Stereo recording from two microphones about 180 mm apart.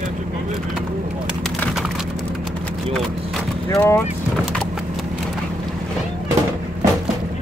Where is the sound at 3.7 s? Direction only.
15° left (ahead or behind).